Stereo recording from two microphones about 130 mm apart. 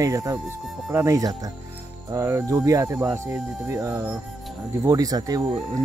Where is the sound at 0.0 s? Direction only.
25° right (ahead or behind).